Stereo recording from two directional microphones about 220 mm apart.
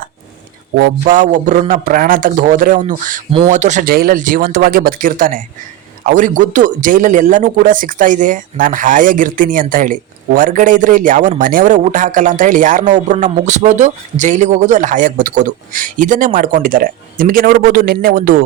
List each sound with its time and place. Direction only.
0.8 s a man's voice: 35° right (ahead or behind)